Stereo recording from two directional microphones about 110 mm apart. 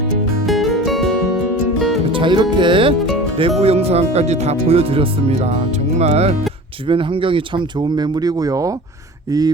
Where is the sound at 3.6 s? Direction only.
65° right (ahead or behind).